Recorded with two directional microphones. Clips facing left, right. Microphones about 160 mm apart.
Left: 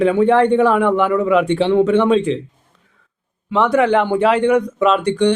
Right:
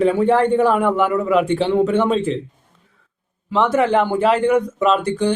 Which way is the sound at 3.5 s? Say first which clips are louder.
Left 2 dB; centre (ahead or behind).